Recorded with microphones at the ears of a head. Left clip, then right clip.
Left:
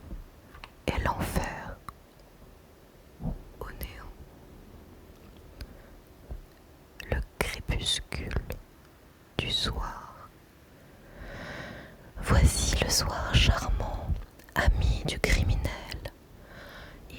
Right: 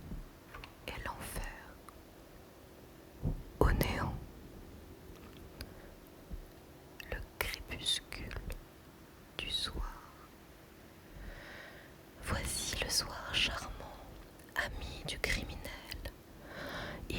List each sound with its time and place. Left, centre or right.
0.6 s whispering: left
3.6 s whispering: right
6.9 s whispering: left